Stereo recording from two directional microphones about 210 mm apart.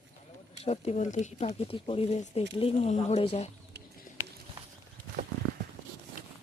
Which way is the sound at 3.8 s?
50° right (ahead or behind).